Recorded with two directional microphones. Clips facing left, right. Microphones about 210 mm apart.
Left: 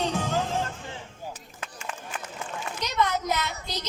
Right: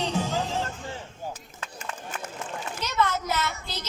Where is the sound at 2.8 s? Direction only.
15° left (ahead or behind).